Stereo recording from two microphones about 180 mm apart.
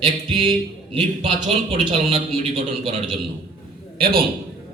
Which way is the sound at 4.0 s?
55° right (ahead or behind).